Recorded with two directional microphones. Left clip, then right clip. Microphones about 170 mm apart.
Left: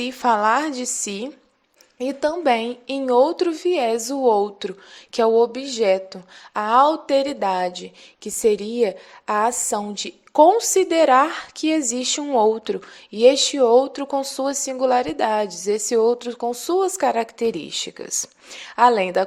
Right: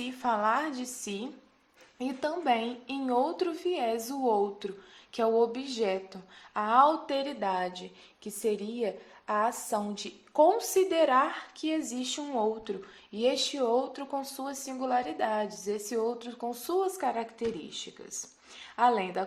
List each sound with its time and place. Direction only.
0.0 s a woman's voice: 55° left (ahead or behind)